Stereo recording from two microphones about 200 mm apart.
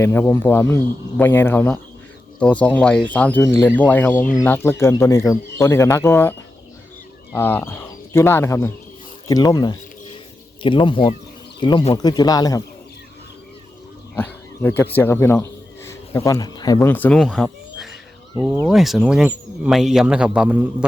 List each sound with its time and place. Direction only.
0.0 s a man's voice: 10° left (ahead or behind)
7.3 s speech: 10° left (ahead or behind)
14.2 s pig: 10° left (ahead or behind)
14.9 s speech: 10° left (ahead or behind); by 20.7 s 5° right (ahead or behind)